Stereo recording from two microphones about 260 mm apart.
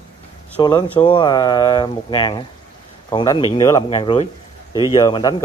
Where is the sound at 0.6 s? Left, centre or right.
Centre.